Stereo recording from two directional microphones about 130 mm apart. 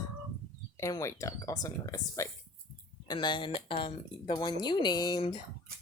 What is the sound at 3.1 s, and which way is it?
Speech, 35° left (ahead or behind).